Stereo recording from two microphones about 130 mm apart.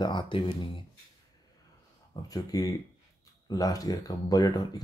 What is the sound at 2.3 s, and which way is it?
Speech, 25° left (ahead or behind).